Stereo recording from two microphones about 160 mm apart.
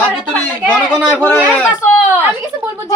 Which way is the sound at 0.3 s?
5° left (ahead or behind).